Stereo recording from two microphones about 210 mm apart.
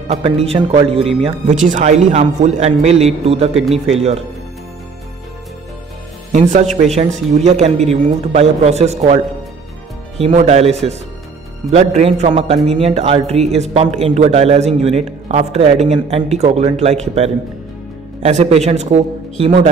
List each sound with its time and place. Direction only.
0.1 s speech: 30° right (ahead or behind)
6.3 s a man's voice: 35° right (ahead or behind)